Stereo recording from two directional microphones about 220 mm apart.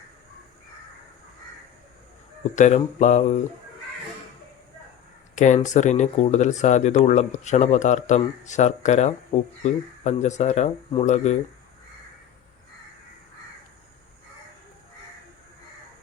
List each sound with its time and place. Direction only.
2.6 s speech: 35° left (ahead or behind)
5.3 s a sound: 35° left (ahead or behind)
5.6 s speech: 35° left (ahead or behind)